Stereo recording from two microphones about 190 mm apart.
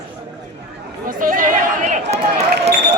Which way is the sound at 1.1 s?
45° right (ahead or behind).